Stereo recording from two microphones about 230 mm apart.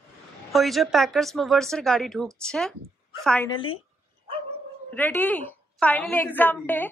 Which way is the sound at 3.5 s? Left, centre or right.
Left.